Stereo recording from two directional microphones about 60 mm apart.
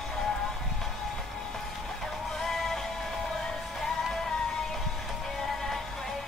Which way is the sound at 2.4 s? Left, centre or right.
Centre.